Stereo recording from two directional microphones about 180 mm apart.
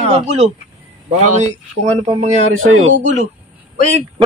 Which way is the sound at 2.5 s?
90° right.